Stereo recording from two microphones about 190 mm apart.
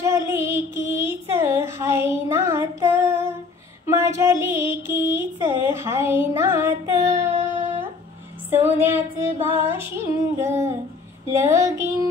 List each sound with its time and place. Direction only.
0.0 s child singing: 15° right (ahead or behind)
3.8 s female singing: 15° right (ahead or behind)
5.7 s child singing: 15° right (ahead or behind)
8.5 s female singing: 10° right (ahead or behind)